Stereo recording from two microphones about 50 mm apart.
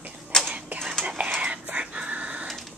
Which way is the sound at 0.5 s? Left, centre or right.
Right.